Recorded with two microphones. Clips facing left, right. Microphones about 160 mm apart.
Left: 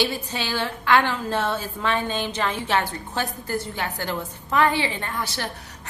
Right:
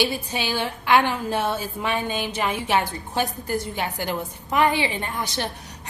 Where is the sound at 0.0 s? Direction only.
15° right (ahead or behind).